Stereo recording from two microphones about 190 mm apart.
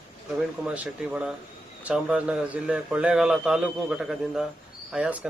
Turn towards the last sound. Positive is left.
turn(degrees=-5)  # may be behind; listen again after turning